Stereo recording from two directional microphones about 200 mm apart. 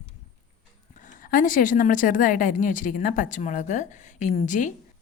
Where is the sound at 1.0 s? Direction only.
40° left (ahead or behind).